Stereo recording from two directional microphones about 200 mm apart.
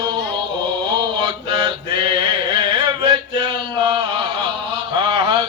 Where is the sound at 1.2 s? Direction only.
25° right (ahead or behind).